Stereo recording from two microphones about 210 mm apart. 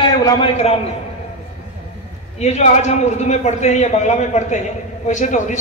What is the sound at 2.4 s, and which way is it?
A man's voice, 30° left (ahead or behind).